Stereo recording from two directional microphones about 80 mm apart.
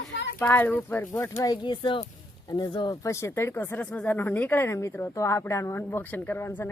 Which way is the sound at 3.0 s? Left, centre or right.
Left.